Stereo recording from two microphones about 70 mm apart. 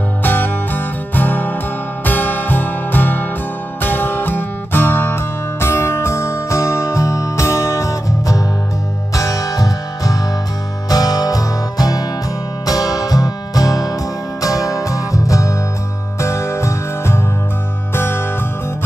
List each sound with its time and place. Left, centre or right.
0.2 s music: left